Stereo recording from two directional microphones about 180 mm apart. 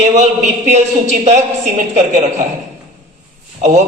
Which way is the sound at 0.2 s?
40° right (ahead or behind).